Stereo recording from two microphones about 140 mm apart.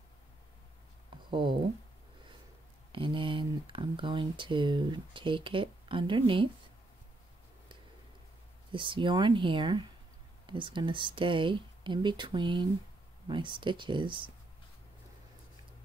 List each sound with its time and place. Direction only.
1.1 s a sound: 35° right (ahead or behind)
2.9 s speech: 35° right (ahead or behind)
8.7 s speech: 35° right (ahead or behind)